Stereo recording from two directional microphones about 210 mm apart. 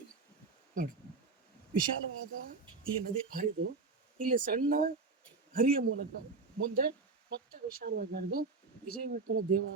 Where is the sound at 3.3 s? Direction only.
40° right (ahead or behind).